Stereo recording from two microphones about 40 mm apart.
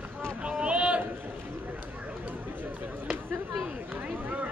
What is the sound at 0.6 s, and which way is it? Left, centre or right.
Run, right.